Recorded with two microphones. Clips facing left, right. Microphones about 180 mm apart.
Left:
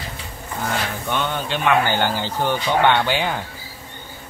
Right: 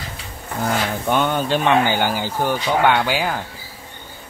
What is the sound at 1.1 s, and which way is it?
Speech, 45° right (ahead or behind).